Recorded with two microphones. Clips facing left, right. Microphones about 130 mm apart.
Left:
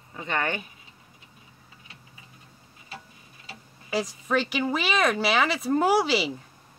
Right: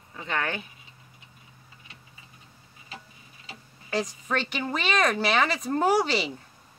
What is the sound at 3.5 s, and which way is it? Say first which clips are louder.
Speech: left 1 dB; 5° left (ahead or behind).